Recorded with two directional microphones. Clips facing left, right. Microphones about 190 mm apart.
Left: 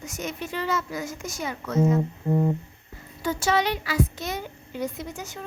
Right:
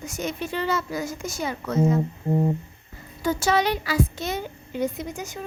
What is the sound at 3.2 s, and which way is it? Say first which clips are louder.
A woman's voice: right 2 dB; 40° right (ahead or behind).